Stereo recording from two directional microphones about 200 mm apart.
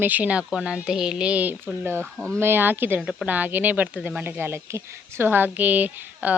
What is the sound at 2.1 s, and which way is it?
Speech, 5° left (ahead or behind).